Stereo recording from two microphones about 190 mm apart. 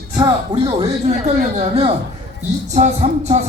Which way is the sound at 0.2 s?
25° right (ahead or behind).